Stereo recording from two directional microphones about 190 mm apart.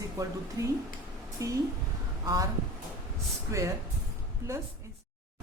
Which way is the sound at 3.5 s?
15° right (ahead or behind).